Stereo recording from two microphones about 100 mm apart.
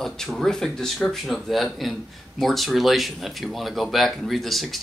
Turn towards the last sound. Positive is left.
turn(degrees=0)  # may be behind; listen again after turning